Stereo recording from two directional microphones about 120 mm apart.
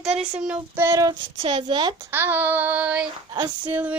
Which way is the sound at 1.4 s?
45° right (ahead or behind).